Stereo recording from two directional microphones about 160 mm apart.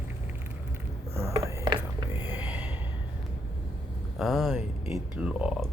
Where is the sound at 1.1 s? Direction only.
15° right (ahead or behind).